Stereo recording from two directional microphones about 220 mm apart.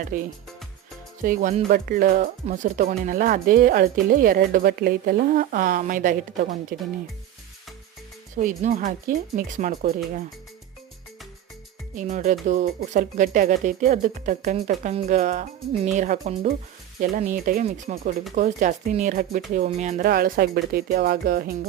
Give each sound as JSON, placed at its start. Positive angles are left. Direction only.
{"t": 0.0, "sound": "speech", "side_deg": -40}
{"t": 8.4, "sound": "speech", "side_deg": -35}
{"t": 11.9, "sound": "speech", "side_deg": -35}